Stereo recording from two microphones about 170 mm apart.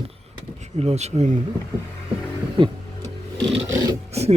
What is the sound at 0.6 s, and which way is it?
Speech, 40° right (ahead or behind).